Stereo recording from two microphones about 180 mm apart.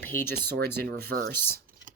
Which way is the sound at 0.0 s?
10° left (ahead or behind).